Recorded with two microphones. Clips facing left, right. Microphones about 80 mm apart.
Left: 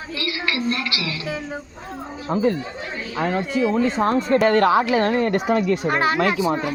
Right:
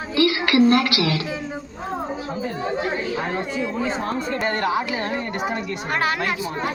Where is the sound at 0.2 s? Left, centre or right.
Right.